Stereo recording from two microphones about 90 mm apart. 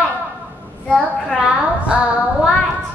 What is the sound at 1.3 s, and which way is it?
Speech, 10° right (ahead or behind).